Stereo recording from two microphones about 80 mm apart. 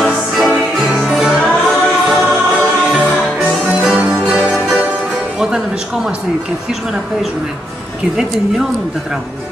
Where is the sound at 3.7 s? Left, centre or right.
Centre.